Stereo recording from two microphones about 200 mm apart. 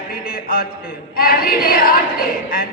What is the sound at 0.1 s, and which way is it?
A man's voice, 50° left (ahead or behind).